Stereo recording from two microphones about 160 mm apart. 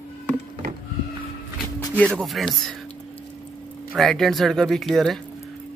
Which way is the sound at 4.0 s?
Centre (ahead or behind).